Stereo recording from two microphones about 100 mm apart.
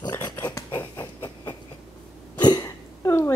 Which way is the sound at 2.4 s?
45° left (ahead or behind).